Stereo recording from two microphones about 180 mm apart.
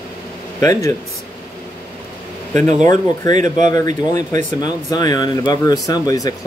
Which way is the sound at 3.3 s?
45° right (ahead or behind).